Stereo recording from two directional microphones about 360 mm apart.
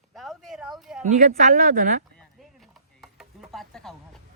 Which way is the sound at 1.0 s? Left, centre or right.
Centre.